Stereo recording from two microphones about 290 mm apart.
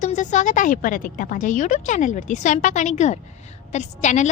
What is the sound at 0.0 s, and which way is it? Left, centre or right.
A woman's voice, left.